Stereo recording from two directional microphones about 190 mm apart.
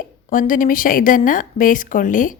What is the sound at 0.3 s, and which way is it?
A woman's voice, 45° left (ahead or behind).